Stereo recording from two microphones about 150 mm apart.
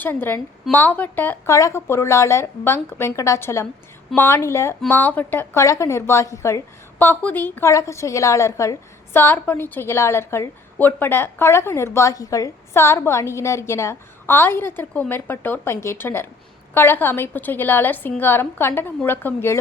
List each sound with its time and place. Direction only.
0.0 s a woman's voice: 15° left (ahead or behind)